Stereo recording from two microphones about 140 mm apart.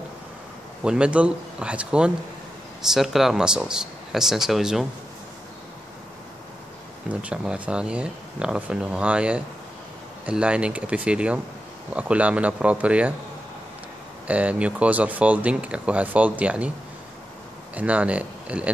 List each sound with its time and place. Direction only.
0.8 s speech: 5° right (ahead or behind)
7.1 s speech: 10° right (ahead or behind)
14.2 s speech: 10° right (ahead or behind)
17.7 s speech: 10° right (ahead or behind)